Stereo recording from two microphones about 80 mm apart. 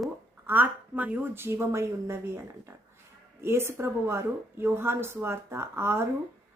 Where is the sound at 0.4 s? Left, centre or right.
Right.